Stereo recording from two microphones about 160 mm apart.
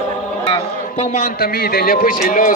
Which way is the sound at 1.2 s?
70° left (ahead or behind).